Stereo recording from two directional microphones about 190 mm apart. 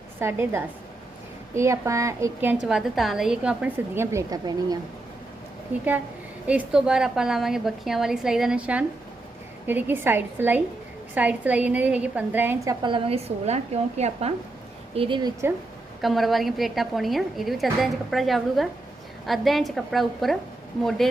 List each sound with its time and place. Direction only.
0.2 s a woman's voice: 15° right (ahead or behind)
6.5 s a woman's voice: 5° right (ahead or behind)
16.0 s a woman's voice: centre (ahead or behind)